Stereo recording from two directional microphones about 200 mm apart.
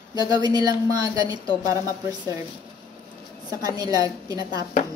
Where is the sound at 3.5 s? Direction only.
20° right (ahead or behind).